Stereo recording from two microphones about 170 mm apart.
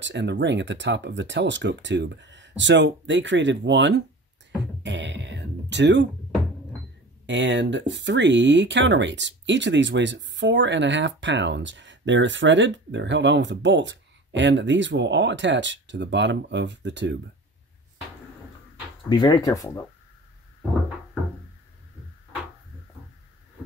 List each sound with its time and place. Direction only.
0.0 s speech: 90° right
4.8 s a sound: 90° right
7.2 s speech: 90° right
19.0 s speech: 25° left (ahead or behind)